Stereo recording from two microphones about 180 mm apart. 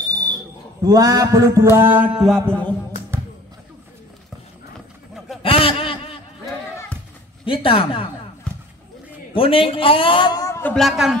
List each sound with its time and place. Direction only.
0.8 s mantra: 20° right (ahead or behind); by 2.7 s 5° left (ahead or behind)
5.4 s a sound: 30° left (ahead or behind)
7.4 s a man's voice: 30° left (ahead or behind)
9.3 s a man's voice: 30° left (ahead or behind); by 11.1 s centre (ahead or behind)